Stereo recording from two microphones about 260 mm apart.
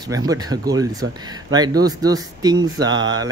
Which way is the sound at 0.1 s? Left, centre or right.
Centre.